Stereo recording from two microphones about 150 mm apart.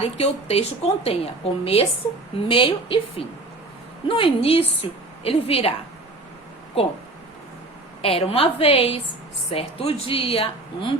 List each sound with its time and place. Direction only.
0.0 s a woman's voice: 45° left (ahead or behind)
8.0 s a woman's voice: 40° left (ahead or behind)